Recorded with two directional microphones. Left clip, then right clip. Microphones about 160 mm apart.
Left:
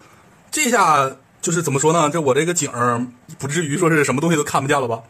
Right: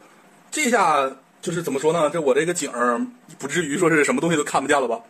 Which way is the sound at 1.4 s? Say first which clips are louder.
Left 4 dB; 30° left (ahead or behind).